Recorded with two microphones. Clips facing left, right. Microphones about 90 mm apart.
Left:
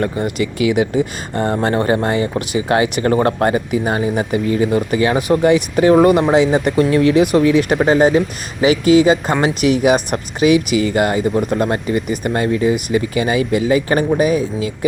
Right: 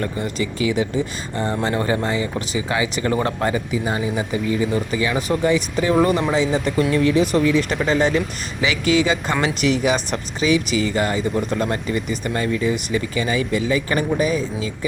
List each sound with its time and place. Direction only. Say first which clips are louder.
0.0 s speech: left 5 dB; 50° left (ahead or behind)
0.7 s speech: left 5 dB; 60° left (ahead or behind)
1.7 s speech: left 5 dB; 45° left (ahead or behind)
6.3 s speech: left 6 dB; 60° left (ahead or behind)